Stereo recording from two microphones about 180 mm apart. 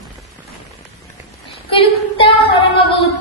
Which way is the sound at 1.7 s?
30° left (ahead or behind).